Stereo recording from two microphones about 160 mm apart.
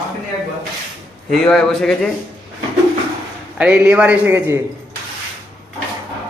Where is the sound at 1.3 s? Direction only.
Centre (ahead or behind).